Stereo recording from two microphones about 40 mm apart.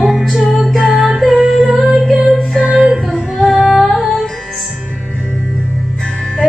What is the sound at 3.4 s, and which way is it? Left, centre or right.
Music, centre.